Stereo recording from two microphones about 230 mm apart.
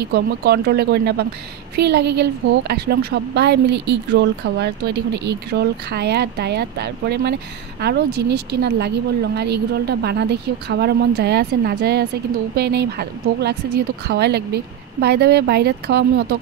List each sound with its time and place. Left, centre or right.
0.0 s speech: right